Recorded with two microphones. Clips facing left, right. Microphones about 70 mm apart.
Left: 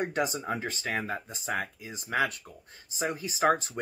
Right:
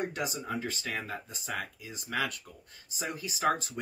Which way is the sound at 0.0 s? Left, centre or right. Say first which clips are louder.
Left 4 dB; left.